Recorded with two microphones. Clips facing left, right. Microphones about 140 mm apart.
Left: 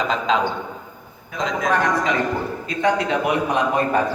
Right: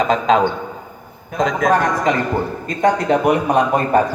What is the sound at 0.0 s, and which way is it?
A man's voice, 50° right (ahead or behind).